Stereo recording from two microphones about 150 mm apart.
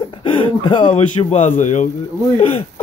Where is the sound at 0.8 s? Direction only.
45° left (ahead or behind).